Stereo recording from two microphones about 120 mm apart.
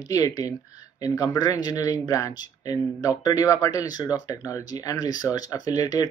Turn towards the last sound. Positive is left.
turn(degrees=30)  # may be behind; listen again after turning